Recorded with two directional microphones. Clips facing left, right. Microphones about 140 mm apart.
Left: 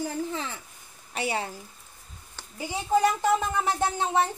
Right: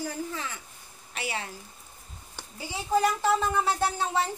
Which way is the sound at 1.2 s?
30° left (ahead or behind).